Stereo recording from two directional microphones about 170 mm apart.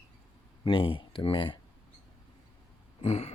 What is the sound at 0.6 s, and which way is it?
Speech, 30° left (ahead or behind).